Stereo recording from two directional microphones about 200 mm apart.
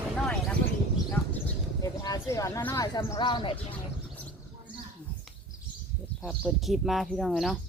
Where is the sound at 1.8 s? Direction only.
15° left (ahead or behind).